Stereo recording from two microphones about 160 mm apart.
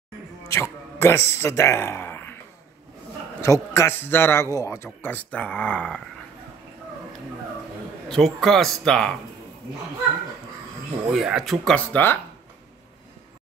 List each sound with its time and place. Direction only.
0.4 s music: 15° left (ahead or behind)
1.3 s speech: 15° left (ahead or behind)
3.3 s a man's voice: 20° left (ahead or behind)
8.1 s speech: centre (ahead or behind)
11.1 s speech: 5° right (ahead or behind)